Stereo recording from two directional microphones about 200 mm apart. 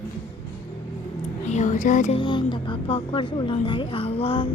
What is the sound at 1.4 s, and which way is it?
Music, 35° left (ahead or behind).